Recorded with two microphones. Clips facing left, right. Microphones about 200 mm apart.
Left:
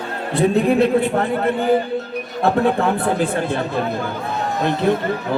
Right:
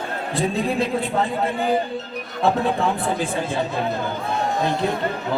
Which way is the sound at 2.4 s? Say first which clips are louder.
Left 3 dB; 60° left (ahead or behind).